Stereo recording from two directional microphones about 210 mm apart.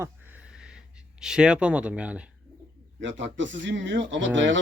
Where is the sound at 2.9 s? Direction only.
60° right (ahead or behind).